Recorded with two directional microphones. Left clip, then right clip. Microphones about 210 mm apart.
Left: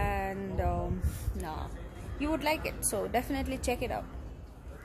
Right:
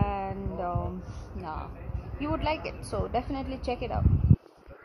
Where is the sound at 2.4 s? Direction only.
20° left (ahead or behind).